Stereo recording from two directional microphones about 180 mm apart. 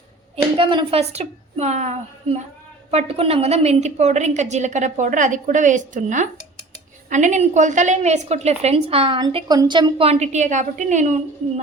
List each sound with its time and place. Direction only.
0.5 s a woman's voice: 30° right (ahead or behind)